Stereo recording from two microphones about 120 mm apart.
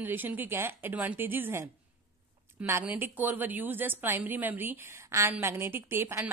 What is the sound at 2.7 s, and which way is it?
A man's voice, 15° right (ahead or behind).